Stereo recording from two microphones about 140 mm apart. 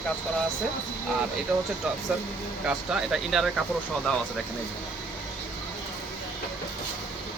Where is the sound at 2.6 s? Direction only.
5° right (ahead or behind).